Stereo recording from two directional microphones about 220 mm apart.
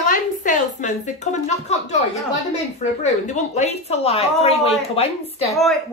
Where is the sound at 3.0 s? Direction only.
35° left (ahead or behind).